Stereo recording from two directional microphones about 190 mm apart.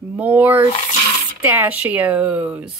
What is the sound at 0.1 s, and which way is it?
Speech, 10° right (ahead or behind).